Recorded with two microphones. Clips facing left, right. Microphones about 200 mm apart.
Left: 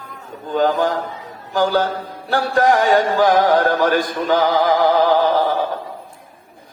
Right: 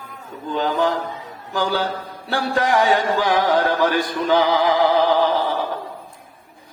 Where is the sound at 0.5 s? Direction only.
45° left (ahead or behind).